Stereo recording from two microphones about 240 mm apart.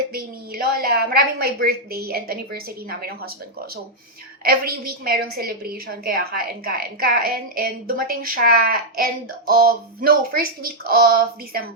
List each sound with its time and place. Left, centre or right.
0.6 s a woman's voice: right
4.4 s a woman's voice: right